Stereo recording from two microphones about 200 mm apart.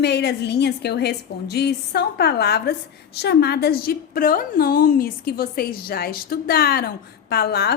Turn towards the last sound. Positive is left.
turn(degrees=55)  # may be behind; listen again after turning